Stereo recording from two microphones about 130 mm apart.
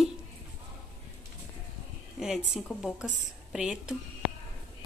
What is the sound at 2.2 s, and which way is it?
A woman's voice, centre (ahead or behind).